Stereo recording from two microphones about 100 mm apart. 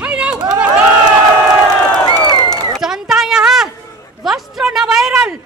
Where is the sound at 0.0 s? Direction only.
10° right (ahead or behind).